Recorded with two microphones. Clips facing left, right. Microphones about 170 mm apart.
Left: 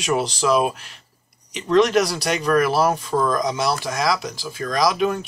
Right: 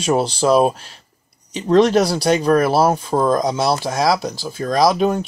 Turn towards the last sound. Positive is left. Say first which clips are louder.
# right 4 dB
turn(degrees=-35)  # may be behind; listen again after turning